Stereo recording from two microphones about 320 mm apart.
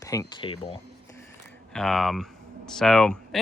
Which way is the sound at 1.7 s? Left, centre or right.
Centre.